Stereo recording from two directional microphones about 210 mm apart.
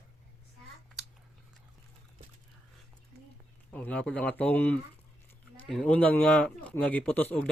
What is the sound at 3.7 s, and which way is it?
Speech, 5° left (ahead or behind).